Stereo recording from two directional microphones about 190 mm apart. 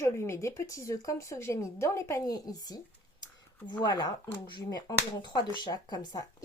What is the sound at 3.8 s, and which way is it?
Speech, 20° left (ahead or behind).